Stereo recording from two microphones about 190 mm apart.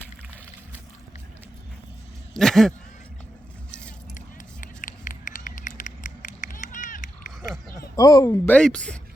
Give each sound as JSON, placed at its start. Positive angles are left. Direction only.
{"t": 2.3, "sound": "speech", "side_deg": 0}
{"t": 4.6, "sound": "a sound", "side_deg": 45}
{"t": 7.9, "sound": "speech", "side_deg": 20}